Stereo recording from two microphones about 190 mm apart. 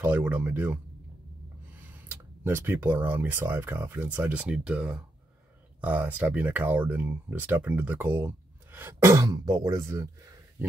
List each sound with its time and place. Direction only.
0.0 s speech: 10° right (ahead or behind)
2.0 s speech: 10° right (ahead or behind)